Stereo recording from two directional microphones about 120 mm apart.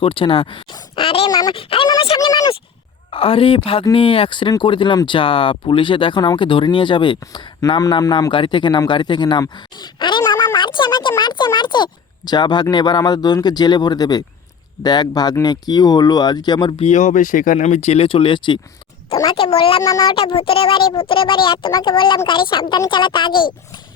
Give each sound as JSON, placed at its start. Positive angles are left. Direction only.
{"t": 0.0, "sound": "speech", "side_deg": 45}
{"t": 1.0, "sound": "a sound", "side_deg": 50}
{"t": 1.3, "sound": "speech", "side_deg": 30}
{"t": 1.5, "sound": "speech", "side_deg": 50}
{"t": 2.1, "sound": "speech", "side_deg": 35}
{"t": 3.1, "sound": "speech", "side_deg": 50}
{"t": 7.8, "sound": "a man's voice", "side_deg": 30}
{"t": 10.5, "sound": "a sound", "side_deg": 40}
{"t": 11.2, "sound": "speech", "side_deg": 40}
{"t": 16.8, "sound": "speech", "side_deg": 80}
{"t": 19.4, "sound": "speech", "side_deg": 50}
{"t": 19.8, "sound": "a man's voice", "side_deg": 30}
{"t": 20.1, "sound": "speech", "side_deg": 50}